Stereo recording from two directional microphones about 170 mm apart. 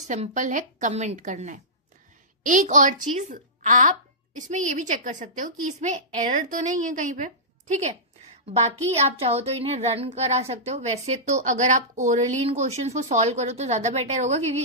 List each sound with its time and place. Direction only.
0.1 s a woman's voice: 45° right (ahead or behind)